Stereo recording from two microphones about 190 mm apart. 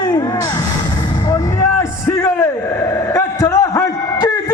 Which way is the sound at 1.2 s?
15° left (ahead or behind).